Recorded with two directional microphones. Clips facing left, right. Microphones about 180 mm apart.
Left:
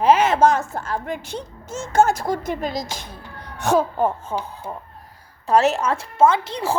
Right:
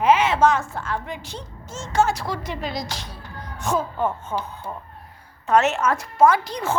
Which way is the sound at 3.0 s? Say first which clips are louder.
Even; 60° left (ahead or behind).